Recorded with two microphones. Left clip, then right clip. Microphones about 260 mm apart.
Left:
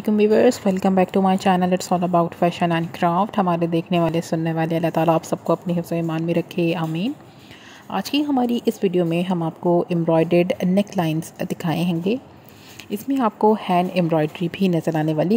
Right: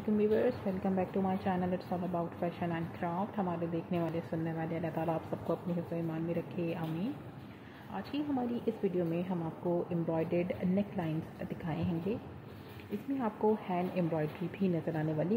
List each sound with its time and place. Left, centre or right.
0.2 s speech: left
13.2 s speech: left